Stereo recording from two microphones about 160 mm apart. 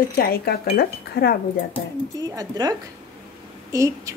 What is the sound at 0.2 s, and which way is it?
Speech, 70° left (ahead or behind).